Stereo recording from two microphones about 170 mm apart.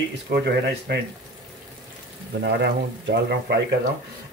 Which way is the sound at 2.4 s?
80° right.